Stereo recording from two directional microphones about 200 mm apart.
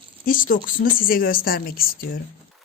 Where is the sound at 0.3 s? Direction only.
45° left (ahead or behind).